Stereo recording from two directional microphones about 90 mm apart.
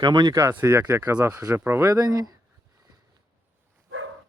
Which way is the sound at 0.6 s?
30° right (ahead or behind).